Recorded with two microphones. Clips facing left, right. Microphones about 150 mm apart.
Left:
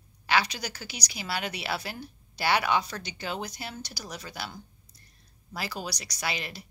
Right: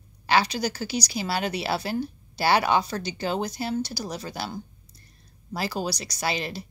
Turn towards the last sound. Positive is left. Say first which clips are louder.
# right 6 dB
turn(degrees=-30)  # may be behind; listen again after turning